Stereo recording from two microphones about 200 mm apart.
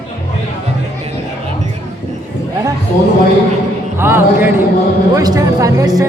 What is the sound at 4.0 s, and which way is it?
Speech, 10° right (ahead or behind).